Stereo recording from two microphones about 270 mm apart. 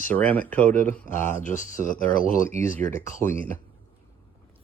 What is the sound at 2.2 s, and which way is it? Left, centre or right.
Speech, left.